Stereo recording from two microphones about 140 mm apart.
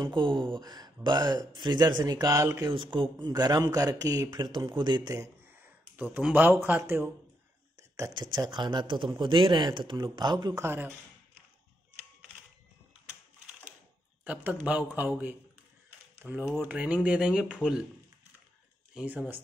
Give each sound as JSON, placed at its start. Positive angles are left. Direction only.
{"t": 0.0, "sound": "speech", "side_deg": -35}
{"t": 2.7, "sound": "speech", "side_deg": -35}
{"t": 5.1, "sound": "a sound", "side_deg": -15}
{"t": 6.3, "sound": "a man's voice", "side_deg": -15}
{"t": 10.6, "sound": "a man's voice", "side_deg": -15}
{"t": 14.2, "sound": "a man's voice", "side_deg": -10}
{"t": 18.9, "sound": "a man's voice", "side_deg": -10}